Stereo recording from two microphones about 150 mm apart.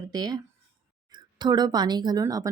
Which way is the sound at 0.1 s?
25° right (ahead or behind).